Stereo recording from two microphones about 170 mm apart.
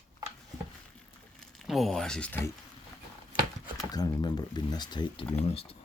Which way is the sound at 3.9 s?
25° left (ahead or behind).